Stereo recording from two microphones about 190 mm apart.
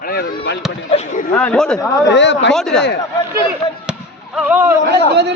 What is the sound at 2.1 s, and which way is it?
Speech, 70° left (ahead or behind).